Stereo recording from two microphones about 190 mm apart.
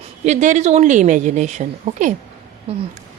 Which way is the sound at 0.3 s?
40° right (ahead or behind).